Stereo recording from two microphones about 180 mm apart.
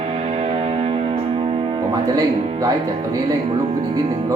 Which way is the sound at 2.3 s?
35° right (ahead or behind).